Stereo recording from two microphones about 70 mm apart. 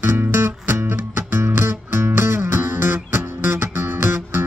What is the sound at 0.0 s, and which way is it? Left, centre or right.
Music, right.